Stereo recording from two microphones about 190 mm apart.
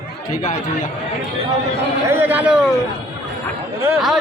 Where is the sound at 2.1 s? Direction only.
10° right (ahead or behind).